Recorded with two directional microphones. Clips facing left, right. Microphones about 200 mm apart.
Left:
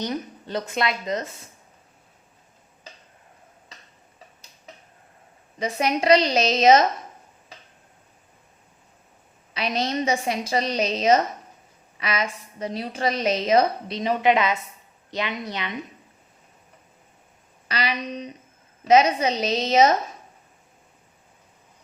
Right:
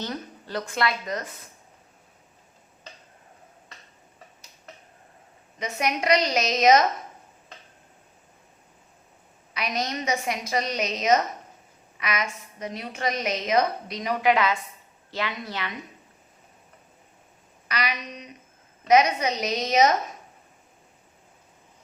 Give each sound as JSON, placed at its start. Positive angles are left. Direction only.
{"t": 0.0, "sound": "a woman's voice", "side_deg": 20}
{"t": 5.5, "sound": "a woman's voice", "side_deg": 30}
{"t": 9.6, "sound": "a woman's voice", "side_deg": 30}
{"t": 17.7, "sound": "a sound", "side_deg": 30}
{"t": 18.9, "sound": "a woman's voice", "side_deg": 25}